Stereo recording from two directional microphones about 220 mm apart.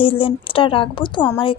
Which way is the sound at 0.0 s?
25° left (ahead or behind).